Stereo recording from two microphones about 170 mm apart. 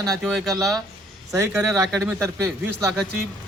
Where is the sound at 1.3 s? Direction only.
15° right (ahead or behind).